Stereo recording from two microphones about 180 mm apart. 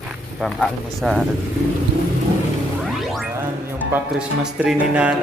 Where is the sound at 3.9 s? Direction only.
5° right (ahead or behind).